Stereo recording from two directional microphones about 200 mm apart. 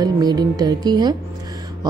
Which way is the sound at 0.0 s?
20° right (ahead or behind).